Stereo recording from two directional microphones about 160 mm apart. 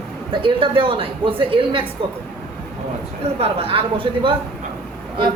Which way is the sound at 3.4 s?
35° right (ahead or behind).